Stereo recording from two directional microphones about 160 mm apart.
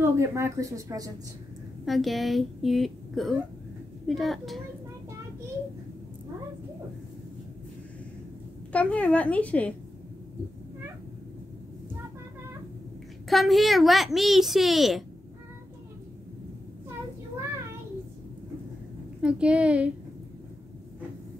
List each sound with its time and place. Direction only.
0.0 s speech: 15° right (ahead or behind)
1.9 s a child's voice: centre (ahead or behind)
8.7 s a woman's voice: 10° left (ahead or behind)
13.3 s a child's voice: centre (ahead or behind)
19.2 s a woman's voice: 5° right (ahead or behind)